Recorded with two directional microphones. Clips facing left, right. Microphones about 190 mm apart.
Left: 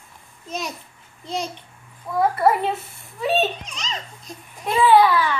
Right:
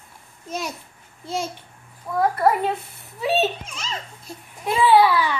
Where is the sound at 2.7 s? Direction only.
5° right (ahead or behind).